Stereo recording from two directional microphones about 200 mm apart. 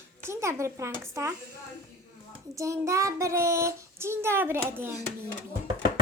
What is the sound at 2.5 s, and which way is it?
Child singing, 15° right (ahead or behind).